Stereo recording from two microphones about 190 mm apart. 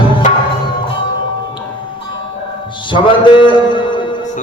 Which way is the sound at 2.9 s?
25° left (ahead or behind).